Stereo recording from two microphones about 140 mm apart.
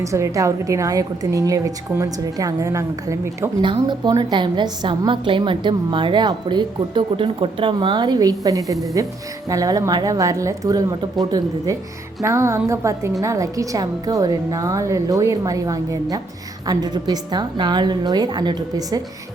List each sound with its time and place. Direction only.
0.0 s a woman's voice: 20° right (ahead or behind)
3.6 s a woman's voice: 35° right (ahead or behind)